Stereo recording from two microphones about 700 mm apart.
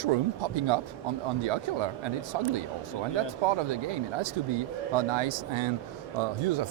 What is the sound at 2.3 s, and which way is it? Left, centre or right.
Speech, right.